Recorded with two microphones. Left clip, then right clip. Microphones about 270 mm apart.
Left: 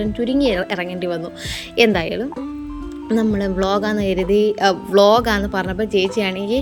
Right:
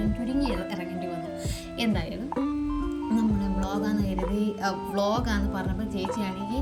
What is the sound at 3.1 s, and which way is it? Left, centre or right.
Music, centre.